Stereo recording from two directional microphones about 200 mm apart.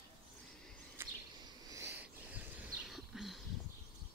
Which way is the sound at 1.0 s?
10° right (ahead or behind).